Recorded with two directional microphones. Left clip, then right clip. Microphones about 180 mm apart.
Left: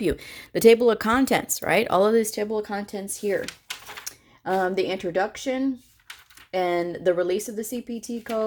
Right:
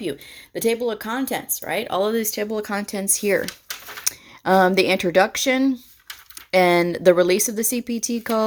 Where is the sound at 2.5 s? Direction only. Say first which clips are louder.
Right 2 dB; 20° right (ahead or behind).